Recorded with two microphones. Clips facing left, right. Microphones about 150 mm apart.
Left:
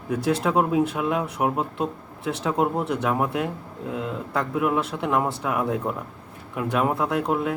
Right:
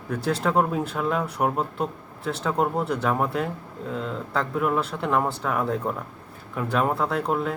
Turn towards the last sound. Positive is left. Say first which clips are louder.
# left 1 dB
turn(degrees=5)  # may be behind; listen again after turning